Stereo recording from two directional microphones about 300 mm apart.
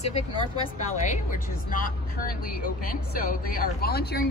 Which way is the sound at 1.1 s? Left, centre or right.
Left.